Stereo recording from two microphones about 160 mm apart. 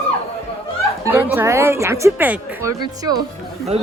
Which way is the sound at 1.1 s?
15° right (ahead or behind).